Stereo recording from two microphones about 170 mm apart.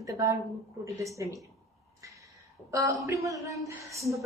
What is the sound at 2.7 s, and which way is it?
A woman's voice, 20° right (ahead or behind).